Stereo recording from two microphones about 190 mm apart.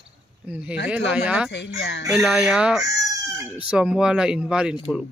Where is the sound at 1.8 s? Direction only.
70° left (ahead or behind).